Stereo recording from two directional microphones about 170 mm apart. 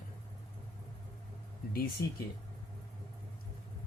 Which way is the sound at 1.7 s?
65° left (ahead or behind).